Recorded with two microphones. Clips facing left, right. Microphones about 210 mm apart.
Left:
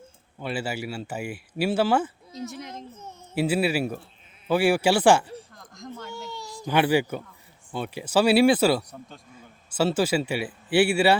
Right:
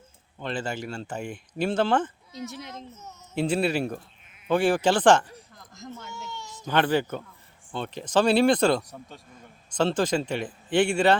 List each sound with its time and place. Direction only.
0.3 s speech: 10° left (ahead or behind)
2.7 s a child's voice: 30° left (ahead or behind)
3.3 s speech: 5° left (ahead or behind)
5.5 s a sound: 5° right (ahead or behind)
6.1 s a sound: 35° left (ahead or behind)
6.7 s speech: 10° left (ahead or behind)